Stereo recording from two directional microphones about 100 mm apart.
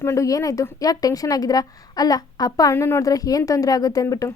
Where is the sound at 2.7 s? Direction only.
25° left (ahead or behind).